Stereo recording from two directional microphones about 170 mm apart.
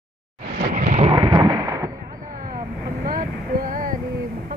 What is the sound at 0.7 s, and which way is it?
Thunder, 45° right (ahead or behind).